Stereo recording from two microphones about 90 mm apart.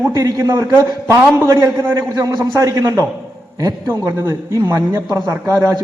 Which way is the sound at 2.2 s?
40° right (ahead or behind).